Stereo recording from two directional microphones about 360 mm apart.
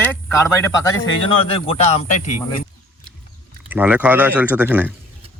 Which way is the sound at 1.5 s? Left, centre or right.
Centre.